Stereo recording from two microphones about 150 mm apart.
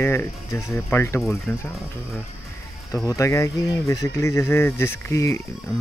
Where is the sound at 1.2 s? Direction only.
Centre (ahead or behind).